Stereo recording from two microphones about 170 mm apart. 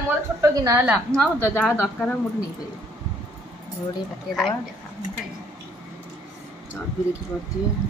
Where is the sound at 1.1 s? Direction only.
10° left (ahead or behind).